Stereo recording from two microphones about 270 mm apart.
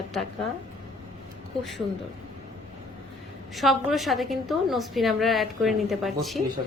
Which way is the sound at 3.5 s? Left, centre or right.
Centre.